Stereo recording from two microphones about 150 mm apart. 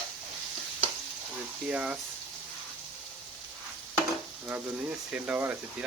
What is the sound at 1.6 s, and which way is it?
Speech, 5° right (ahead or behind).